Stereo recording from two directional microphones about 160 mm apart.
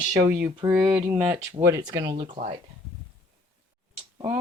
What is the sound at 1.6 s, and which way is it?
Speech, 20° right (ahead or behind).